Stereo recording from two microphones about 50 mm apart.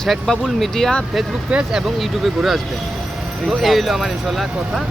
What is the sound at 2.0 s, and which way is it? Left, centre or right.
Speech, centre.